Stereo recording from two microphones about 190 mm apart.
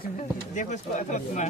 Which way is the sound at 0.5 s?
40° left (ahead or behind).